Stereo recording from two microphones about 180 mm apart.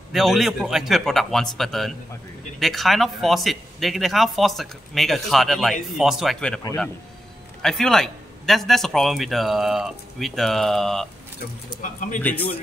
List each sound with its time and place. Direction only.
0.1 s speech: centre (ahead or behind)
7.6 s speech: 5° left (ahead or behind)
11.8 s speech: 45° left (ahead or behind)
12.2 s speech: 10° left (ahead or behind)